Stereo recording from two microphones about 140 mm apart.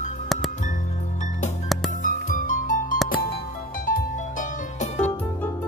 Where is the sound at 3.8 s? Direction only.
70° left (ahead or behind).